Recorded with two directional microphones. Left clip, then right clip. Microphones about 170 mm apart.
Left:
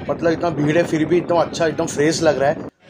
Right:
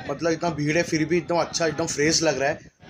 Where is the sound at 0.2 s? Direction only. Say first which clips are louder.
Left 5 dB; 15° left (ahead or behind).